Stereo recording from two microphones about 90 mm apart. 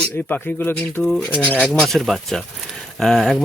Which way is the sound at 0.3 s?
20° left (ahead or behind).